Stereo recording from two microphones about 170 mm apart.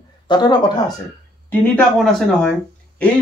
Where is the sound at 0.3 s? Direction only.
25° left (ahead or behind).